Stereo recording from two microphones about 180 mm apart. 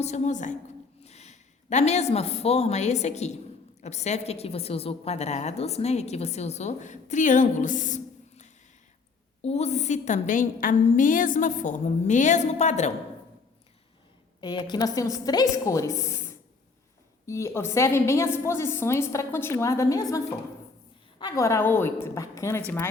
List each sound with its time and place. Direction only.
0.0 s a woman's voice: 40° left (ahead or behind)
14.4 s a woman's voice: 25° left (ahead or behind)